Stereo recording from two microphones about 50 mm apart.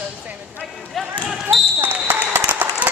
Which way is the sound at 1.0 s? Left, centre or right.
Centre.